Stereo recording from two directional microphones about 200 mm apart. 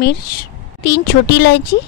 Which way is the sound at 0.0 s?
50° left (ahead or behind).